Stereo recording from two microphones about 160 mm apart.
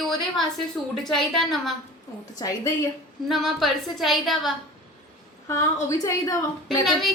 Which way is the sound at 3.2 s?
Centre (ahead or behind).